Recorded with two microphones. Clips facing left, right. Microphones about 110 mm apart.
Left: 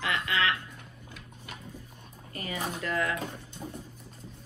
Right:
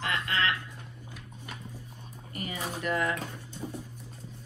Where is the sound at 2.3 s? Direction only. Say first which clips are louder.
Left 1 dB; 20° right (ahead or behind).